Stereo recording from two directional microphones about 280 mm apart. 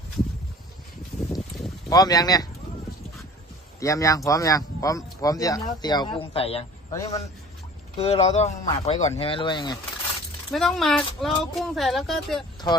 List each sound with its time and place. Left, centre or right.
1.3 s a sound: centre
1.9 s speech: centre
3.8 s speech: centre
10.5 s speech: centre